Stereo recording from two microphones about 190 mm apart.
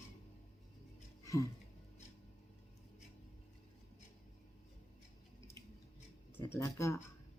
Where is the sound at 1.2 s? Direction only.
15° left (ahead or behind).